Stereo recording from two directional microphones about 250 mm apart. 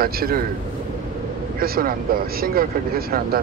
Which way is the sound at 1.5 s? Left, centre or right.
Right.